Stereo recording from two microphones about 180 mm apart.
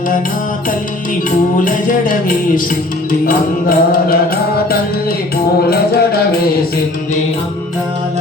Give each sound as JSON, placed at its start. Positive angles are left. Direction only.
{"t": 1.5, "sound": "music", "side_deg": 50}
{"t": 3.2, "sound": "music", "side_deg": 50}
{"t": 5.7, "sound": "music", "side_deg": 60}